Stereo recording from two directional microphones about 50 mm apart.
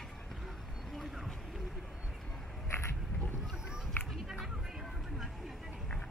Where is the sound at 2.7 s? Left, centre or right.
Left.